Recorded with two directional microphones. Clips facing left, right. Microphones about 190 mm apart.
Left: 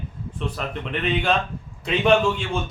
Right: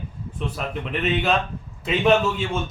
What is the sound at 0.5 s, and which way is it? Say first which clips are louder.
A man's voice: right 3 dB; 5° right (ahead or behind).